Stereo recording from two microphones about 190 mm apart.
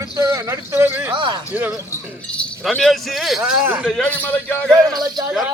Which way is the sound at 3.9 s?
5° left (ahead or behind).